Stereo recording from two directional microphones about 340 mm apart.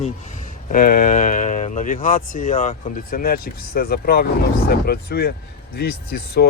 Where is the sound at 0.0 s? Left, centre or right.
Left.